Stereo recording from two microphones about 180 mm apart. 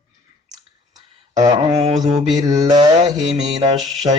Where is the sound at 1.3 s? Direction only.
25° right (ahead or behind).